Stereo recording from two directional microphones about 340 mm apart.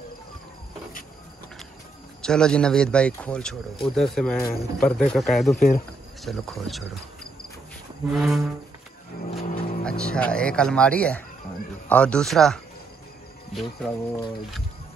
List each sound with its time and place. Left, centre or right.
2.2 s speech: centre
8.1 s speech: centre
9.4 s music: left
9.8 s speech: centre